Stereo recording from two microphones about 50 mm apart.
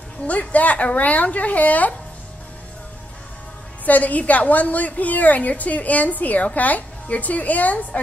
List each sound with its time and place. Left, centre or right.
0.3 s a woman's voice: left
3.8 s a woman's voice: left